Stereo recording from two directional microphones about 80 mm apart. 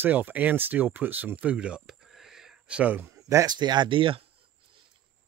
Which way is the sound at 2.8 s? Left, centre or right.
Right.